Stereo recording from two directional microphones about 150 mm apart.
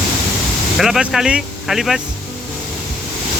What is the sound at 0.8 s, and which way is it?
Speech, 5° right (ahead or behind).